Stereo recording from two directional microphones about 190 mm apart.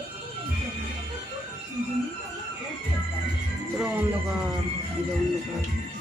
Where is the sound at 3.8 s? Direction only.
5° right (ahead or behind).